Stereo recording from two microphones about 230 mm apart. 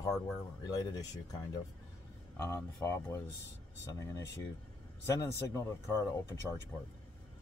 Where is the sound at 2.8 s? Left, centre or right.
Centre.